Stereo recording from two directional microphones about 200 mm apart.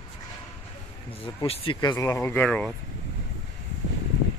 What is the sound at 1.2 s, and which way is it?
Speech, 30° left (ahead or behind).